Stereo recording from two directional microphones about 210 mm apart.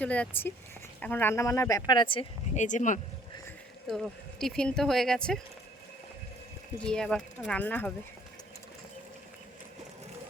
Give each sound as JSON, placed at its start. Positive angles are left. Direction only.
{"t": 0.0, "sound": "speech", "side_deg": 5}
{"t": 2.6, "sound": "speech", "side_deg": 35}
{"t": 3.8, "sound": "speech", "side_deg": 0}
{"t": 6.8, "sound": "speech", "side_deg": 5}